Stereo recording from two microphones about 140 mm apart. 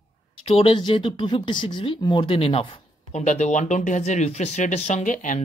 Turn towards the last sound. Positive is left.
turn(degrees=65)  # may be behind; listen again after turning